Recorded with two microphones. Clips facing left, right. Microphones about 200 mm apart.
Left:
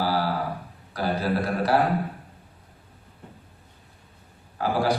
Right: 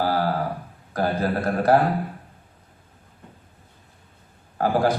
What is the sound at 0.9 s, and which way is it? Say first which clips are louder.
Speech: right 2 dB; 45° right (ahead or behind).